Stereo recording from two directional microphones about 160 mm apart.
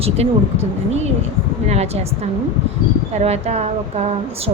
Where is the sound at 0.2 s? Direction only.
40° right (ahead or behind).